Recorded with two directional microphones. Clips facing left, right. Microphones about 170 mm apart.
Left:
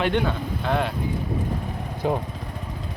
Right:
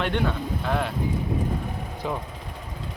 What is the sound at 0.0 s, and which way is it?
Speech, centre (ahead or behind).